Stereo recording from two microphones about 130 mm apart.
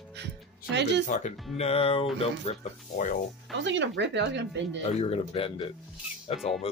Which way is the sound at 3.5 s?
Centre (ahead or behind).